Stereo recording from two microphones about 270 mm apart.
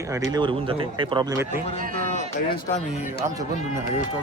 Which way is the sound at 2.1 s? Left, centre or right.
Left.